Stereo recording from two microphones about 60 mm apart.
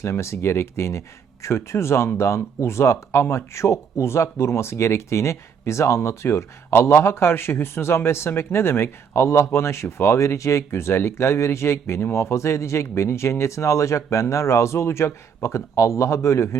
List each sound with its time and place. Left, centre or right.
0.0 s speech: left